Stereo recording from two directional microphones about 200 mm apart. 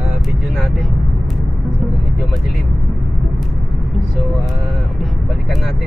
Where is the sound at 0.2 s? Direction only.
Centre (ahead or behind).